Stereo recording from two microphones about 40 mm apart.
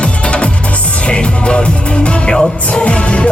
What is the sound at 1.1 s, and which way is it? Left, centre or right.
Speech, left.